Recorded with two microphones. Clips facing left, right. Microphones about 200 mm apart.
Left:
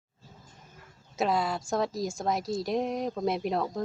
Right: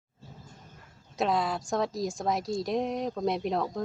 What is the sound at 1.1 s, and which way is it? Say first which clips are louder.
A woman's voice: even; centre (ahead or behind).